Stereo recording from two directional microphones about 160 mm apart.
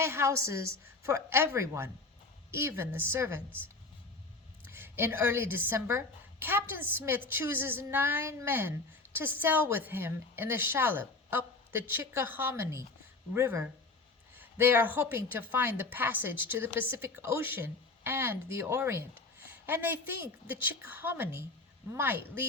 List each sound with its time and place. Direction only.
0.0 s a woman's voice: 15° right (ahead or behind)
4.6 s a woman's voice: 15° right (ahead or behind)